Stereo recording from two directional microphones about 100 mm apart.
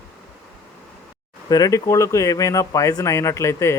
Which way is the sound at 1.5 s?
35° left (ahead or behind).